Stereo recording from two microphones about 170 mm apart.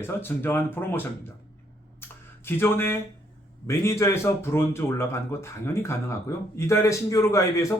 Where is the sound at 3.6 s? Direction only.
15° left (ahead or behind).